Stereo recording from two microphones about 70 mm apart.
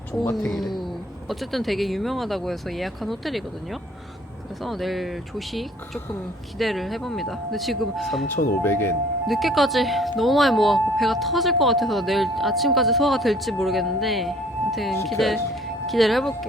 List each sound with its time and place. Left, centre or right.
0.4 s speech: centre
8.3 s speech: left
9.2 s speech: centre